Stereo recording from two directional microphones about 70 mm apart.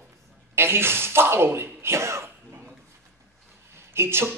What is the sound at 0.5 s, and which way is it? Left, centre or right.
Speech, right.